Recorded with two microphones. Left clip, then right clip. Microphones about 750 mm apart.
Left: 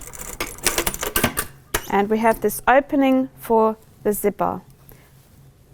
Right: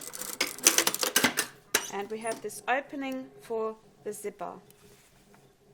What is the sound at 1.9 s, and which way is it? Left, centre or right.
A woman's voice, left.